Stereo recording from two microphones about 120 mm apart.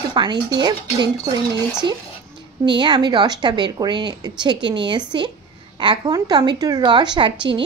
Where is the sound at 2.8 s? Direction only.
40° right (ahead or behind).